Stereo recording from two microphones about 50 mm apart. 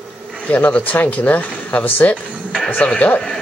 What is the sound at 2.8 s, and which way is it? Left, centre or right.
Speech, left.